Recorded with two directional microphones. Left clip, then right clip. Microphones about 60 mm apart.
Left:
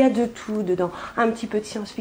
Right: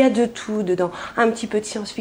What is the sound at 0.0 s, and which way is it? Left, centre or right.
A woman's voice, centre.